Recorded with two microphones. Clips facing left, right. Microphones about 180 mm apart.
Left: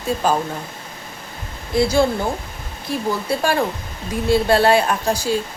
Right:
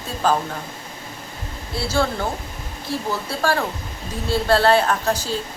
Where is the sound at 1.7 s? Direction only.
15° left (ahead or behind).